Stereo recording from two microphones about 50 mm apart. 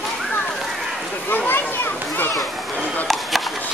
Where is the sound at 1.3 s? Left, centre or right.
Left.